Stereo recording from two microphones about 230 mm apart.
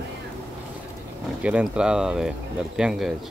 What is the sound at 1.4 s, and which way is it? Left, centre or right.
Speech, centre.